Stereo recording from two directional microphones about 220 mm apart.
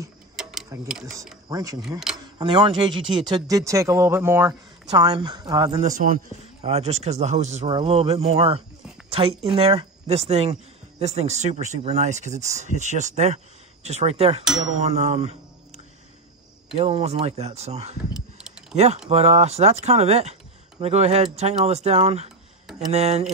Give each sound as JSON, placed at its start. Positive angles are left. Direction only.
{"t": 0.4, "sound": "tick-tock", "side_deg": 0}
{"t": 0.8, "sound": "speech", "side_deg": -5}
{"t": 1.5, "sound": "speech", "side_deg": -15}
{"t": 1.8, "sound": "speech", "side_deg": 0}
{"t": 2.3, "sound": "speech", "side_deg": -20}
{"t": 5.8, "sound": "speech", "side_deg": -35}
{"t": 14.9, "sound": "music", "side_deg": -30}
{"t": 16.7, "sound": "speech", "side_deg": -30}
{"t": 18.1, "sound": "a sound", "side_deg": 0}
{"t": 19.0, "sound": "speech", "side_deg": -30}